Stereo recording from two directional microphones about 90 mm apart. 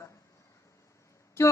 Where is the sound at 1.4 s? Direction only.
30° left (ahead or behind).